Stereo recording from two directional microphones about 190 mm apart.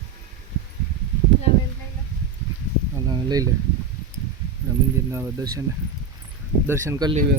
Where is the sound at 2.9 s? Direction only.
20° right (ahead or behind).